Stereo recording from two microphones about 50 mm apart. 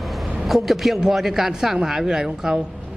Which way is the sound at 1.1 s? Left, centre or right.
Centre.